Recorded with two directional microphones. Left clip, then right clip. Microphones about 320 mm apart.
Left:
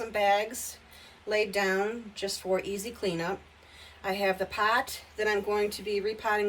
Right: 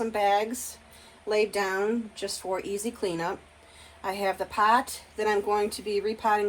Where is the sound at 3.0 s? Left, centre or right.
Centre.